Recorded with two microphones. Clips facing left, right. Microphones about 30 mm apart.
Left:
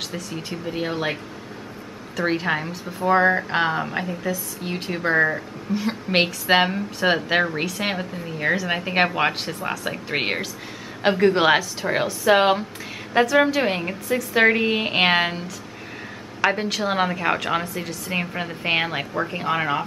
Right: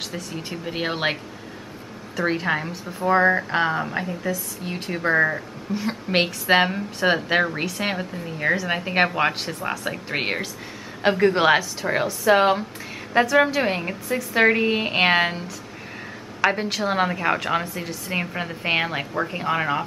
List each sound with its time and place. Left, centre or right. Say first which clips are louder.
0.1 s a woman's voice: left 1 dB; centre
0.7 s speech: right 1 dB; right
2.2 s a woman's voice: even; centre
13.1 s a woman's voice: even; centre
16.3 s a sound: even; centre
16.8 s a woman's voice: even; centre